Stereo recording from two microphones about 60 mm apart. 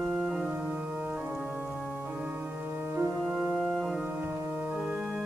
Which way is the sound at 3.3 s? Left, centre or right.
Centre.